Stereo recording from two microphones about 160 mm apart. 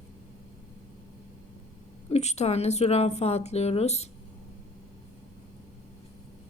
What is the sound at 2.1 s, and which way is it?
Speech, 45° left (ahead or behind).